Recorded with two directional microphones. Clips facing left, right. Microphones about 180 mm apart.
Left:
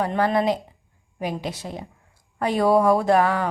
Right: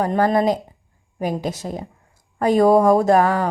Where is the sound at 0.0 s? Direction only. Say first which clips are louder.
Right 3 dB; 40° right (ahead or behind).